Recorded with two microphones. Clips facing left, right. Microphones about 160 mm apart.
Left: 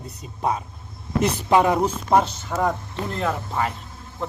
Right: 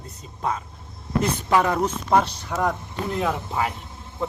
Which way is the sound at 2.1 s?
5° left (ahead or behind).